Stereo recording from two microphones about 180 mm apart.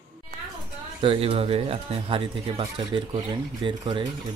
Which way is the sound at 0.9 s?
30° right (ahead or behind).